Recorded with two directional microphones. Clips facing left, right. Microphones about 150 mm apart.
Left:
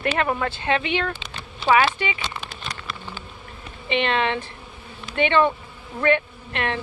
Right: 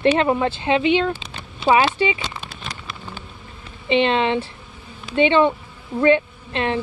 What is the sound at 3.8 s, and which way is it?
Speech, 25° right (ahead or behind).